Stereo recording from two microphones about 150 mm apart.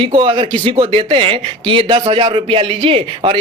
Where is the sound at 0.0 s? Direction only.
35° right (ahead or behind).